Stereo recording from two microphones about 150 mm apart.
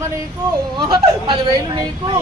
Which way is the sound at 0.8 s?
30° right (ahead or behind).